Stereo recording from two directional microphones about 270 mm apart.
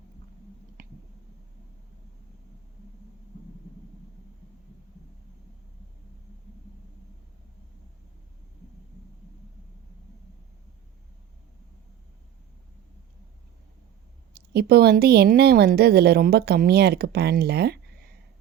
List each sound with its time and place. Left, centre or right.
14.3 s a woman's voice: right